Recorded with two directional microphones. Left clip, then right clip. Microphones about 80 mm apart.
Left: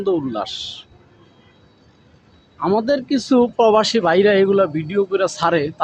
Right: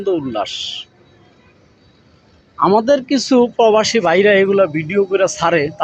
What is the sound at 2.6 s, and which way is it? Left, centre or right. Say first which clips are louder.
Speech: right 6 dB; centre.